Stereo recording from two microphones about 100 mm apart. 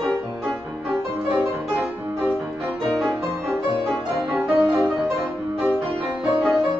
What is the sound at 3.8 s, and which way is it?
Music, 5° right (ahead or behind).